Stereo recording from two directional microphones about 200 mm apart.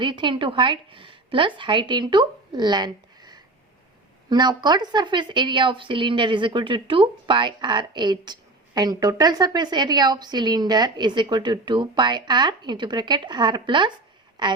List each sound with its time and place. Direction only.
0.0 s a woman's voice: 25° right (ahead or behind)